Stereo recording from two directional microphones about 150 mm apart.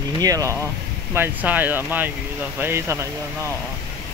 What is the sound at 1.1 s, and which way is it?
Speech, 10° right (ahead or behind).